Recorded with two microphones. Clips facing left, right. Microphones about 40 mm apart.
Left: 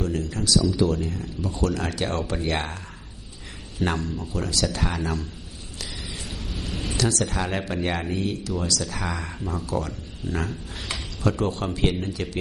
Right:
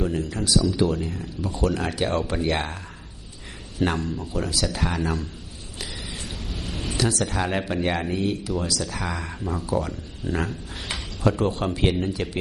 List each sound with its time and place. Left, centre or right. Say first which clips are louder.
0.4 s speech: even; centre
3.8 s speech: right 1 dB; centre
8.8 s speech: even; centre